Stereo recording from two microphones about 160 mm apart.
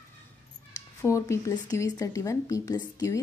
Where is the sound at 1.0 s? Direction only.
20° left (ahead or behind).